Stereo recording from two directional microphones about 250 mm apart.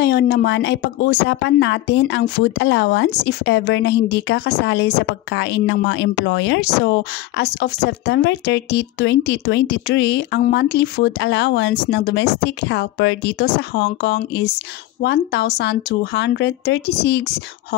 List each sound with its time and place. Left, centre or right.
0.0 s speech: left